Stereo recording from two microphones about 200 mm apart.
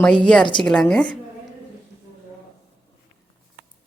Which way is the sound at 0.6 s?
5° left (ahead or behind).